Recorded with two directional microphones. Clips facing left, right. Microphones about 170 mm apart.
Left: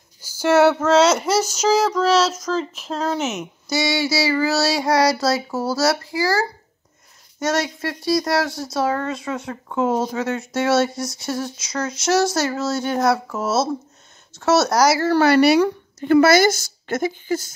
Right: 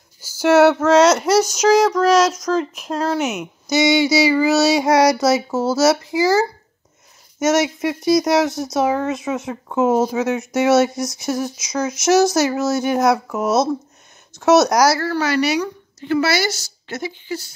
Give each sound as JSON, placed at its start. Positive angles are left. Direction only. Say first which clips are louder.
{"t": 0.4, "sound": "speech", "louder": "right 3 dB", "side_deg": -10}
{"t": 1.6, "sound": "child singing", "louder": "right 4 dB", "side_deg": 0}
{"t": 2.0, "sound": "speech", "louder": "right 3 dB", "side_deg": -15}
{"t": 3.6, "sound": "speech", "louder": "right 6 dB", "side_deg": -20}
{"t": 15.2, "sound": "speech", "louder": "left 6 dB", "side_deg": 55}